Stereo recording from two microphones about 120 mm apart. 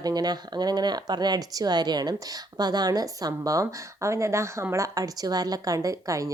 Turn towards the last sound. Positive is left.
turn(degrees=-25)  # may be behind; listen again after turning